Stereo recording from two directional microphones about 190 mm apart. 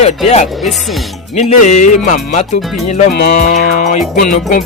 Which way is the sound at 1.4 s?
35° left (ahead or behind).